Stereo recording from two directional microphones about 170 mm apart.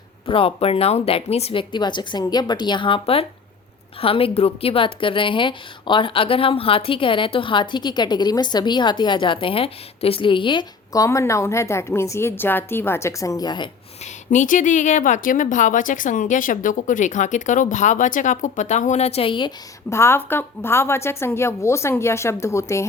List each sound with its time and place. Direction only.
0.3 s a woman's voice: 35° left (ahead or behind)
14.3 s a woman's voice: 50° left (ahead or behind); by 19.5 s 30° left (ahead or behind)
19.9 s a woman's voice: 15° left (ahead or behind)